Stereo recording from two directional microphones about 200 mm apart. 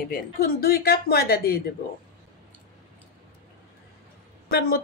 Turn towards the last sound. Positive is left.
turn(degrees=50)  # may be behind; listen again after turning